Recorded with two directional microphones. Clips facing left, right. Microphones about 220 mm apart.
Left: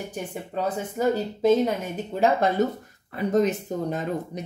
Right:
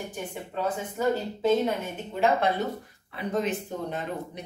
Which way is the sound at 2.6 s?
40° left (ahead or behind).